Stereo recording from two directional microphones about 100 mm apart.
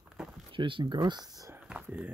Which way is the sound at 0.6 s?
55° right (ahead or behind).